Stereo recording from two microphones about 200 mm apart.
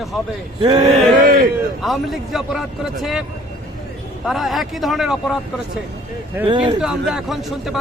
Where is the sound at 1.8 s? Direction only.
Centre (ahead or behind).